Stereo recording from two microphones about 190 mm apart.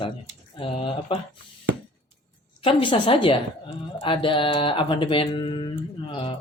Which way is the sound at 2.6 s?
25° left (ahead or behind).